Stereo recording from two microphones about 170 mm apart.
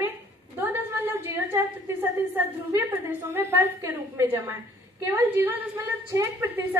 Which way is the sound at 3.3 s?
15° right (ahead or behind).